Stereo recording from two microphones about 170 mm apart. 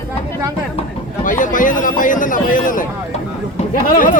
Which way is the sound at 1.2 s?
50° left (ahead or behind).